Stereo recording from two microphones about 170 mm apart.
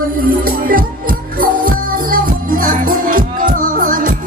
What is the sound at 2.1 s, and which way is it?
Music, 55° right (ahead or behind).